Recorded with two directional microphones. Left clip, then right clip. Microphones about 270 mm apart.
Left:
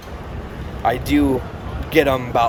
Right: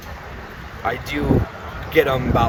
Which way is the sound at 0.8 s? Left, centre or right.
Centre.